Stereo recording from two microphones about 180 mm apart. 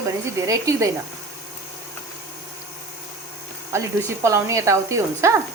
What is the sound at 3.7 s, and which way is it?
A woman's voice, 15° right (ahead or behind).